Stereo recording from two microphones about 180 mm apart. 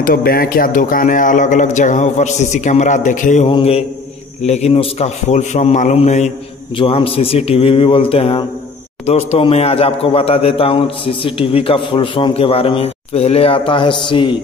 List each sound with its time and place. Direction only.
0.0 s speech: 55° left (ahead or behind)
3.4 s a man's voice: 30° left (ahead or behind)